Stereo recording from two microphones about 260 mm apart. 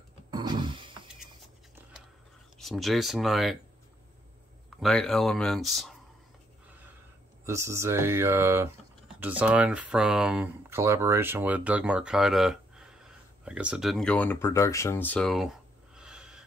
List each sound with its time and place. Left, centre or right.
0.3 s a sound: centre
2.6 s speech: centre
4.7 s speech: centre
7.4 s speech: centre